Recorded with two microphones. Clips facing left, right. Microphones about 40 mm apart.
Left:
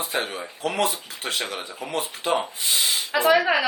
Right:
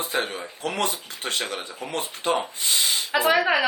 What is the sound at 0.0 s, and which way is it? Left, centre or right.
Speech, centre.